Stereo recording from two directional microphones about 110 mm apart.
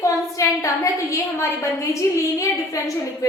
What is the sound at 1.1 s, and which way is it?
A woman's voice, 25° left (ahead or behind).